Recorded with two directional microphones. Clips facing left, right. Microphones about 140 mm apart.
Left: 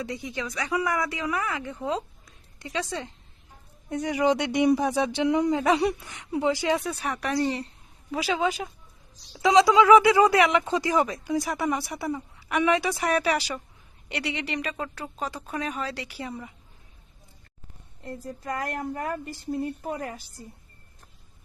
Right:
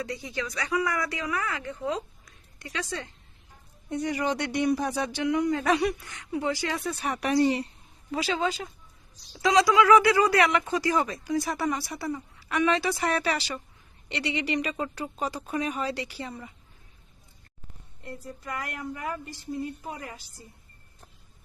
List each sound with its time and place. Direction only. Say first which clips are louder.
0.1 s speech: left 1 dB; 20° left (ahead or behind)
6.8 s speech: even; centre (ahead or behind)
7.2 s speech: right 4 dB; 15° right (ahead or behind)
8.1 s speech: left 2 dB; 10° left (ahead or behind)
18.4 s a woman's voice: left 5 dB; 35° left (ahead or behind); by 20.1 s 50° left (ahead or behind)